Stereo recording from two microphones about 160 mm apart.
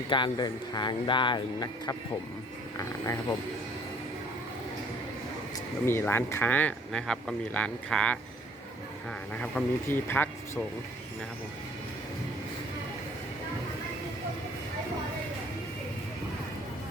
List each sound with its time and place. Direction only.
0.1 s speech: 30° left (ahead or behind)
5.8 s speech: 15° left (ahead or behind)
9.3 s speech: 10° left (ahead or behind)